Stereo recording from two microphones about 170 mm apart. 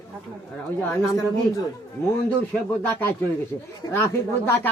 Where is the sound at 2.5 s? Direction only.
10° left (ahead or behind).